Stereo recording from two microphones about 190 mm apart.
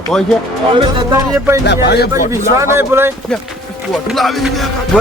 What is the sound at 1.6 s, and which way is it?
Speech, 60° left (ahead or behind).